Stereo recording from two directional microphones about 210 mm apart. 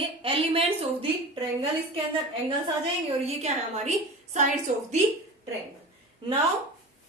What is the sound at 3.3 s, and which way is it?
A woman's voice, 30° right (ahead or behind).